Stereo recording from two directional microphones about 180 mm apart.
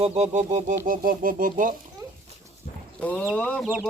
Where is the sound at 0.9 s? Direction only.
50° right (ahead or behind).